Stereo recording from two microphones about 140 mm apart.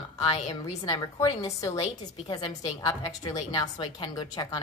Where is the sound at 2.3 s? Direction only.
35° left (ahead or behind).